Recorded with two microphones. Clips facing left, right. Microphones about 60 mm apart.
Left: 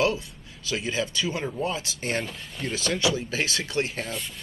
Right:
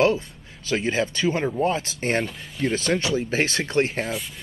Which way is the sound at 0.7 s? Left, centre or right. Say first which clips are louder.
Right 5 dB; right.